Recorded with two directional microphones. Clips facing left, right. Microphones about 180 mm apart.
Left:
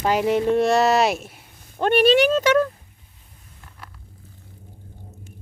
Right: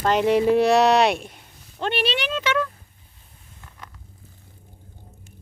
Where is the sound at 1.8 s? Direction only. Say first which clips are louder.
Left 9 dB; 45° left (ahead or behind).